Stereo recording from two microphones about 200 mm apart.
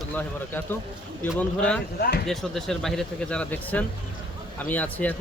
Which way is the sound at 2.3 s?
Centre (ahead or behind).